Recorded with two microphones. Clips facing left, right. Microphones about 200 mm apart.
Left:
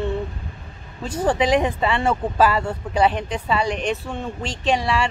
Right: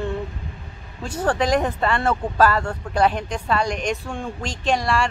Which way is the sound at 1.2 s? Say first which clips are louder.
Left 2 dB; 10° left (ahead or behind).